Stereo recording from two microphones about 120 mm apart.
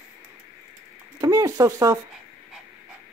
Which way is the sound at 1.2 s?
30° right (ahead or behind).